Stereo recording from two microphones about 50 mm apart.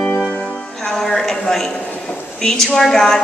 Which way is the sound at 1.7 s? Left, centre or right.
Left.